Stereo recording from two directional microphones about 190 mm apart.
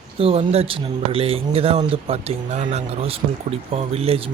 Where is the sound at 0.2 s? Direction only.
30° right (ahead or behind).